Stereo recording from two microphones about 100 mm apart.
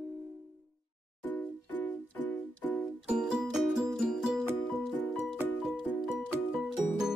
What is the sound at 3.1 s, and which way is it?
Music, 5° right (ahead or behind).